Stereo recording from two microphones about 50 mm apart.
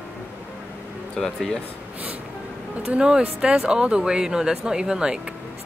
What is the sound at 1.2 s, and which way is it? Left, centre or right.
Speech, centre.